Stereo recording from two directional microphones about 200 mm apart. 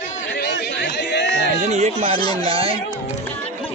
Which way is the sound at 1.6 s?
35° right (ahead or behind).